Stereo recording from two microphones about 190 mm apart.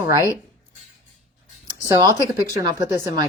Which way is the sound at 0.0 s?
15° right (ahead or behind).